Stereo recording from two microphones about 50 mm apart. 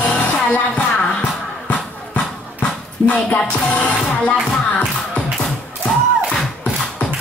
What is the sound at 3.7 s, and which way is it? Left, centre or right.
Music, left.